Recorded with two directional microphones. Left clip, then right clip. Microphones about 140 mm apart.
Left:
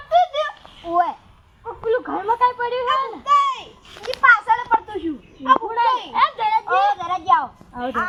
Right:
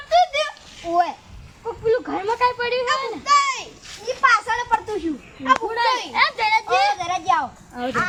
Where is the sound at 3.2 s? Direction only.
10° left (ahead or behind).